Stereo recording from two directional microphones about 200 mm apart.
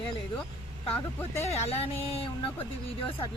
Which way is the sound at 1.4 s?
30° left (ahead or behind).